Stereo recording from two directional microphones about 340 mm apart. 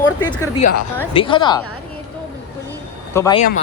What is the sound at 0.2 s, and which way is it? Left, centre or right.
Speech, centre.